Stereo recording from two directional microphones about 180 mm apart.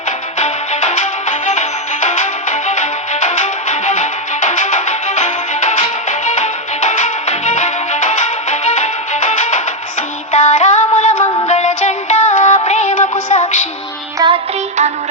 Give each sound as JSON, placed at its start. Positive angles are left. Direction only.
{"t": 0.3, "sound": "music", "side_deg": 40}
{"t": 10.3, "sound": "synthetic singing", "side_deg": 40}
{"t": 11.3, "sound": "music", "side_deg": 35}
{"t": 14.2, "sound": "music", "side_deg": -20}